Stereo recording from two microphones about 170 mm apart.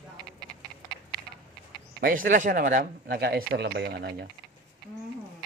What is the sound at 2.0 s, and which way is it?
Speech, 55° right (ahead or behind).